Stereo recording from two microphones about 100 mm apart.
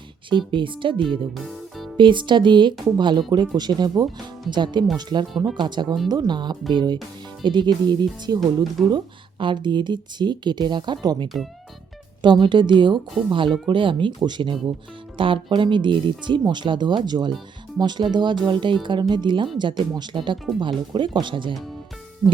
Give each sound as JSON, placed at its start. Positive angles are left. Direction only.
{"t": 0.3, "sound": "speech", "side_deg": -55}
{"t": 1.0, "sound": "speech", "side_deg": 0}
{"t": 2.0, "sound": "speech", "side_deg": -55}
{"t": 8.4, "sound": "speech", "side_deg": 0}
{"t": 9.4, "sound": "speech", "side_deg": -50}
{"t": 12.2, "sound": "speech", "side_deg": -50}